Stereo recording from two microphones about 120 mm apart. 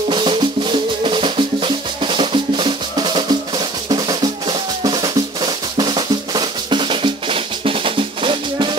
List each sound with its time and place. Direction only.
0.1 s music: 40° right (ahead or behind)